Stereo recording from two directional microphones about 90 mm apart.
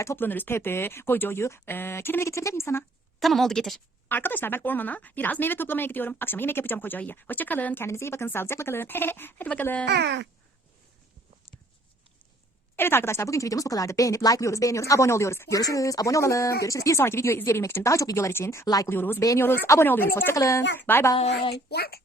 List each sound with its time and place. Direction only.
0.0 s speech: 30° left (ahead or behind)
3.2 s a woman's voice: centre (ahead or behind)
4.1 s speech: 20° left (ahead or behind)
12.7 s speech: 25° left (ahead or behind); by 18.9 s 40° left (ahead or behind)
18.9 s speech: 25° left (ahead or behind)
20.3 s speech: 35° left (ahead or behind)
20.8 s speech: 25° left (ahead or behind)